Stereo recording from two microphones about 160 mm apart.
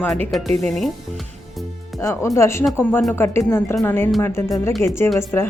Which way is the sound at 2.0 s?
15° left (ahead or behind).